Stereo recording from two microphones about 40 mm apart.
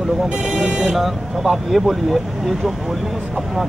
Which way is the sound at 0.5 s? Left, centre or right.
Centre.